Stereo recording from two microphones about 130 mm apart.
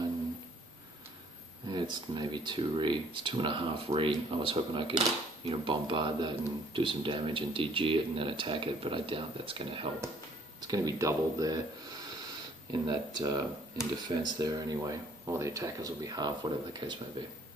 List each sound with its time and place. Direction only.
1.7 s speech: 35° right (ahead or behind)
10.7 s speech: 25° right (ahead or behind)
12.8 s speech: 30° right (ahead or behind)